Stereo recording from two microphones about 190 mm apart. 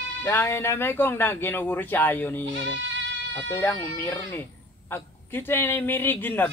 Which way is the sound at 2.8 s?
70° right (ahead or behind).